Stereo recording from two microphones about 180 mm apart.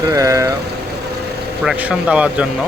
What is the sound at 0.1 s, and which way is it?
Vehicle, 15° right (ahead or behind).